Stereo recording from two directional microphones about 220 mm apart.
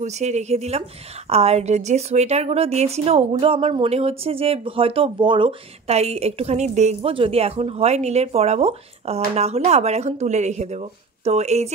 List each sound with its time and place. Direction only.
0.0 s a woman's voice: 30° right (ahead or behind)